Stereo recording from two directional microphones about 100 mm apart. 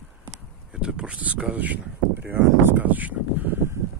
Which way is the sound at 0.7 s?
10° right (ahead or behind).